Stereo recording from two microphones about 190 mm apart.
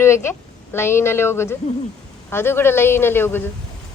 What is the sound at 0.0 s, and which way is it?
A woman's voice, 15° left (ahead or behind).